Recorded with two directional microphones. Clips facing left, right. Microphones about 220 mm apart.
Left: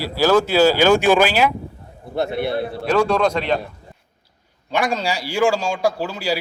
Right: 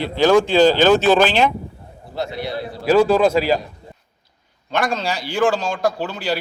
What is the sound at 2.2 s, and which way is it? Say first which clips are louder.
Speech: left 4 dB; 55° left (ahead or behind).